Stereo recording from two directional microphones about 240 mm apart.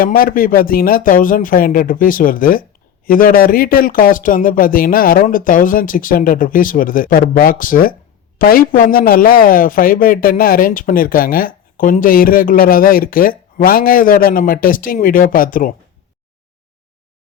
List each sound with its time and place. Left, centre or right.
0.0 s a man's voice: left